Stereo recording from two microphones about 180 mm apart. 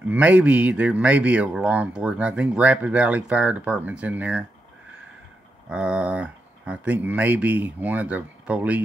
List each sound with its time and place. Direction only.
0.1 s speech: 10° right (ahead or behind)
5.7 s speech: 5° right (ahead or behind)